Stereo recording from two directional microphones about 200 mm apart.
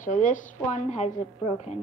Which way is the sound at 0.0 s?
40° left (ahead or behind).